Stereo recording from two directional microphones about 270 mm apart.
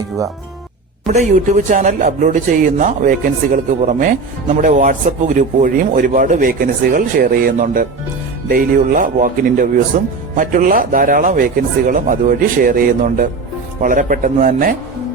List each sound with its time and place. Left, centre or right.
1.7 s speech: right